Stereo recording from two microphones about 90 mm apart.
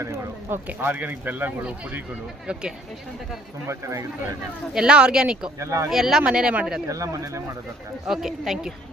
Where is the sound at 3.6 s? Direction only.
35° right (ahead or behind).